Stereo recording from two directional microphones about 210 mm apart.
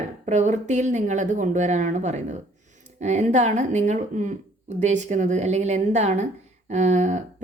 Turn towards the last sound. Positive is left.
turn(degrees=-35)  # may be behind; listen again after turning